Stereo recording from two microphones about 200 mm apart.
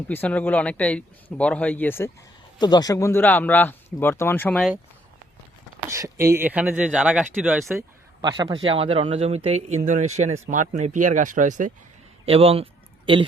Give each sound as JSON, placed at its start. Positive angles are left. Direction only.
{"t": 0.1, "sound": "speech", "side_deg": 10}
{"t": 2.6, "sound": "speech", "side_deg": 20}
{"t": 5.9, "sound": "speech", "side_deg": -15}
{"t": 8.2, "sound": "speech", "side_deg": -20}
{"t": 12.2, "sound": "speech", "side_deg": -30}